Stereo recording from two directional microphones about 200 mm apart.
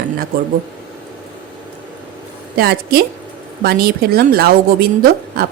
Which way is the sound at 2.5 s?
50° right (ahead or behind).